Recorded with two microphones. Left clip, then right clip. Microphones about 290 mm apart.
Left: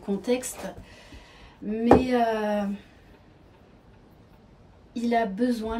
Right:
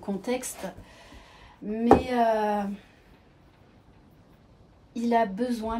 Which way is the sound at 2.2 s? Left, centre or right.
Centre.